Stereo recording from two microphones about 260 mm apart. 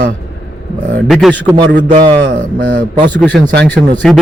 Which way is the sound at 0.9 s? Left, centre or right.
Centre.